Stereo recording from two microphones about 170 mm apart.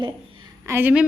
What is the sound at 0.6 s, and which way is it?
Speech, 10° right (ahead or behind).